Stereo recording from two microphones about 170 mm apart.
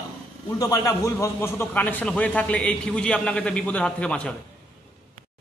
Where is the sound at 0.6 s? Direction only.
20° left (ahead or behind).